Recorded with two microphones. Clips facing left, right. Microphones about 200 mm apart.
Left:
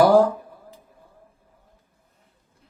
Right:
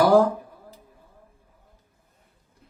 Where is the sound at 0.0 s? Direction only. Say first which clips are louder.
Left 2 dB; 45° left (ahead or behind).